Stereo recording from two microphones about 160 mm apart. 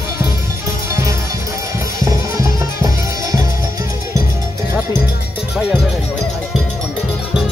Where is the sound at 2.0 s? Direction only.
20° right (ahead or behind).